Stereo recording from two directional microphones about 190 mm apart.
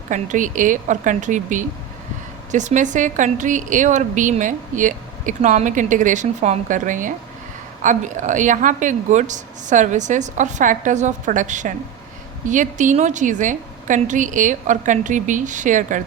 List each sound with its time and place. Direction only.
0.1 s a woman's voice: 40° right (ahead or behind)